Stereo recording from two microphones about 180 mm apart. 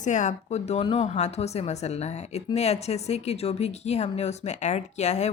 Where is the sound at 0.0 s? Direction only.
45° left (ahead or behind).